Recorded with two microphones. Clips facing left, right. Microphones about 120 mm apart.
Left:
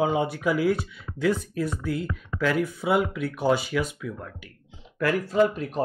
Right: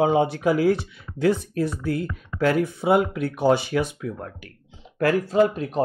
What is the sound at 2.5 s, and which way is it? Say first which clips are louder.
Speech: right 3 dB; 30° right (ahead or behind).